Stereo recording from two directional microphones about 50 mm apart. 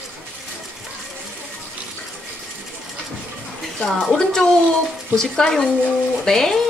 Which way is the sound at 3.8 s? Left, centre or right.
Centre.